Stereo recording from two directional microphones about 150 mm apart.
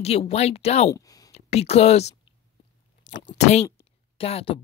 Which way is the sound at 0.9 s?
25° left (ahead or behind).